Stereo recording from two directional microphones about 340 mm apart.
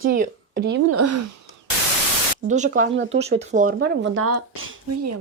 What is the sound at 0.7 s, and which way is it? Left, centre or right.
Speech, right.